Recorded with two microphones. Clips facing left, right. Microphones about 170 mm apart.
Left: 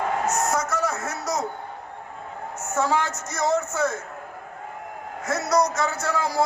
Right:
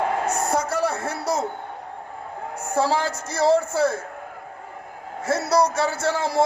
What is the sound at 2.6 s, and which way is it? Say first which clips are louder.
A man's voice: right 2 dB; 30° right (ahead or behind).